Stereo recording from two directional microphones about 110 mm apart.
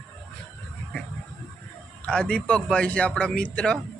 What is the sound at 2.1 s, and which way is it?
A man's voice, 10° left (ahead or behind).